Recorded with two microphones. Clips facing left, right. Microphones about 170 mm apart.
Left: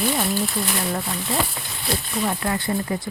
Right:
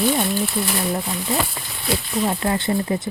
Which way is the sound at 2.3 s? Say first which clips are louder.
Right 3 dB; 25° right (ahead or behind).